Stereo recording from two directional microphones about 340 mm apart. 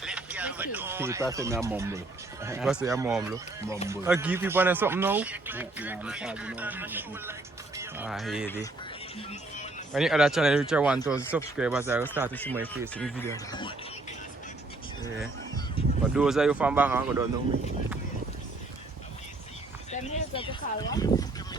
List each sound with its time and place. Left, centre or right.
0.0 s speech: centre
9.1 s music: centre
9.9 s speech: centre
12.3 s speech: centre
15.8 s speech: centre
16.1 s speech: centre
19.9 s a sound: centre